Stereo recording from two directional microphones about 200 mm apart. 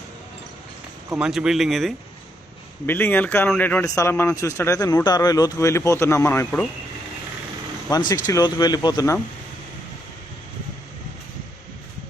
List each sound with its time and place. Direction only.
1.1 s speech: 5° right (ahead or behind)
2.8 s a man's voice: 10° left (ahead or behind)
7.9 s speech: 20° left (ahead or behind)